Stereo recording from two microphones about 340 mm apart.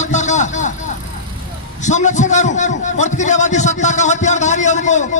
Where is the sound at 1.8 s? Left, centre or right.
Left.